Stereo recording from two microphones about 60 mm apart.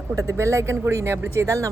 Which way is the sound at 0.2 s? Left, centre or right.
Right.